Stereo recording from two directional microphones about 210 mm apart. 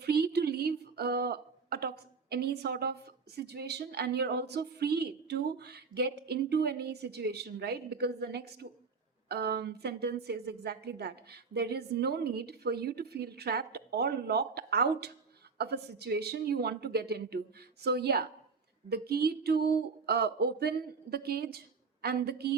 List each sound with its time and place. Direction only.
0.0 s a woman's voice: 50° right (ahead or behind)